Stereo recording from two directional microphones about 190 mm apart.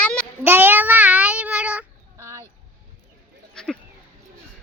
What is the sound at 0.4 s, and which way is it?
Child singing, 10° right (ahead or behind).